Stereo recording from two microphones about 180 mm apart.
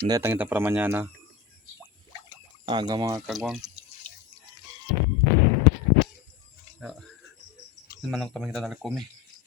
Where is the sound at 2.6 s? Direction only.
25° right (ahead or behind).